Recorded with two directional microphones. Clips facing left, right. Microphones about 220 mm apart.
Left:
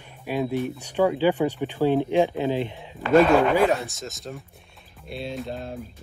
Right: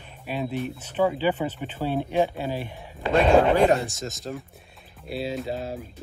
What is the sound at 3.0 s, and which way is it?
Speech, 25° right (ahead or behind).